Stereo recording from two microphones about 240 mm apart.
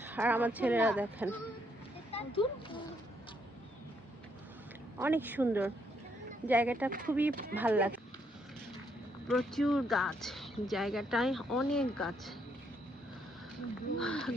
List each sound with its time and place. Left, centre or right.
0.0 s speech: centre
2.1 s speech: left
4.9 s speech: centre
9.2 s speech: centre
14.0 s speech: centre